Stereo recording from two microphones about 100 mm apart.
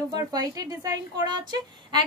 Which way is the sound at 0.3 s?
40° right (ahead or behind).